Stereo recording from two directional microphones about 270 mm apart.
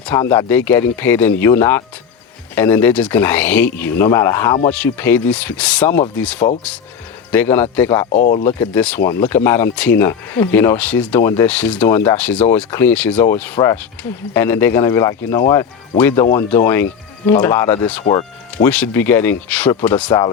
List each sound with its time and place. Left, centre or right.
0.0 s speech: centre
8.1 s speech: left
8.4 s speech: centre
18.0 s speech: left
18.5 s speech: centre
20.1 s speech: centre